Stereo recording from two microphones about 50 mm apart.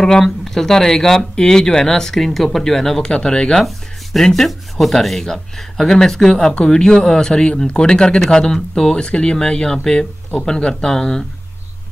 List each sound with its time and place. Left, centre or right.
0.0 s speech: centre
3.6 s speech: centre